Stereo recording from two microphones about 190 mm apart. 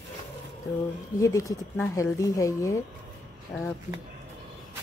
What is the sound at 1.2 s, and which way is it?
A woman's voice, 15° left (ahead or behind).